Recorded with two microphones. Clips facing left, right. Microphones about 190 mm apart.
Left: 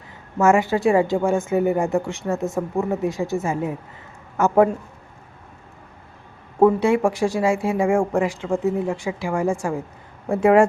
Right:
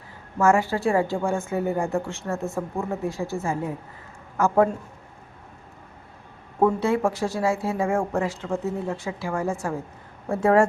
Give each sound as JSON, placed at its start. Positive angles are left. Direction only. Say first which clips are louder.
{"t": 0.3, "sound": "a woman's voice", "louder": "left 3 dB", "side_deg": 20}
{"t": 6.7, "sound": "speech", "louder": "left 4 dB", "side_deg": 15}